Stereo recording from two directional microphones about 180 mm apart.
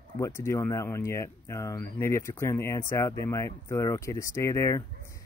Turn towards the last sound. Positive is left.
turn(degrees=15)  # may be behind; listen again after turning